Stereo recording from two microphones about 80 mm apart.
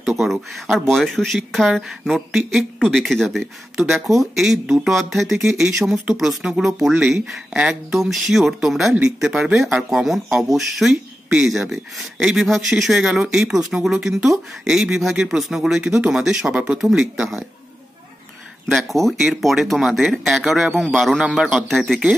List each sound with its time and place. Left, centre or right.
0.0 s speech: centre
6.9 s speech: centre
18.7 s speech: centre